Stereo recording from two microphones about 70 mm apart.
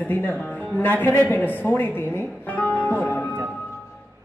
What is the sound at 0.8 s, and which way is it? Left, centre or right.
Music, left.